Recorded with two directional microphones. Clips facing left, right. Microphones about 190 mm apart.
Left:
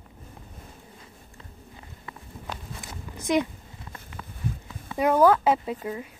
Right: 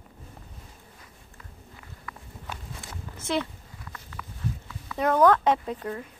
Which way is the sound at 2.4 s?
15° left (ahead or behind).